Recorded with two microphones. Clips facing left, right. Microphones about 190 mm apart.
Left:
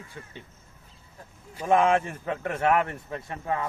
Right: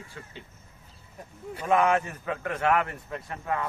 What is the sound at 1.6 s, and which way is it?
A man's voice, 30° left (ahead or behind).